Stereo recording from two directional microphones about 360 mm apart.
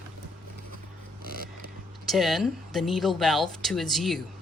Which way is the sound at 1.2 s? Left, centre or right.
Right.